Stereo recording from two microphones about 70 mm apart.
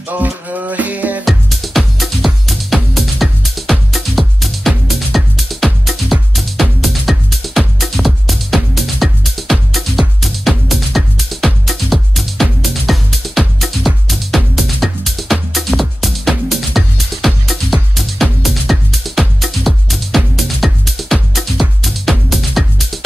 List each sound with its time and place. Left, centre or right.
0.1 s music: right
1.2 s music: centre